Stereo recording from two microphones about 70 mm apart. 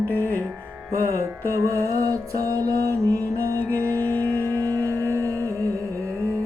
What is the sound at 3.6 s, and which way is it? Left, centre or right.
Mantra, right.